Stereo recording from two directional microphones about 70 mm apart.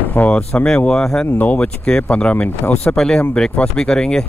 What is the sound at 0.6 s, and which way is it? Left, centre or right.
Speech, centre.